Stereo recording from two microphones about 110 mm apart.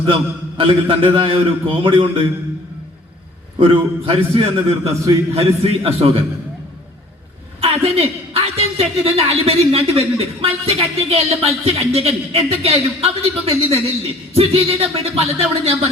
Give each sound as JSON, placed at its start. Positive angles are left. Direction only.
{"t": 0.0, "sound": "a man's voice", "side_deg": -55}
{"t": 3.6, "sound": "a woman's voice", "side_deg": -55}
{"t": 7.6, "sound": "a woman's voice", "side_deg": -65}